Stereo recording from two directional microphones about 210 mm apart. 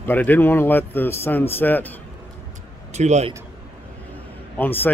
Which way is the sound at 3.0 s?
35° right (ahead or behind).